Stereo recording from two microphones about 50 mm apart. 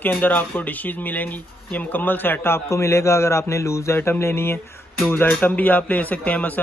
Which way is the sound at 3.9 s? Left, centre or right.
Left.